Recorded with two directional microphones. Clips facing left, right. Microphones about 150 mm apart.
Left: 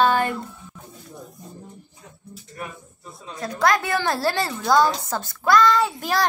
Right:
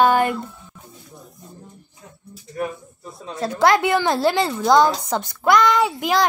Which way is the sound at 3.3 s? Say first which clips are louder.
Right 4 dB; 30° right (ahead or behind).